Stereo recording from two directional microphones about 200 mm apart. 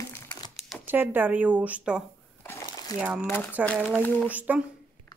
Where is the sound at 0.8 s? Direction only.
10° right (ahead or behind).